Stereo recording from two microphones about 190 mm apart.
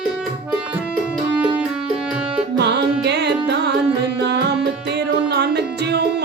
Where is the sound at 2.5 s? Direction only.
65° right (ahead or behind).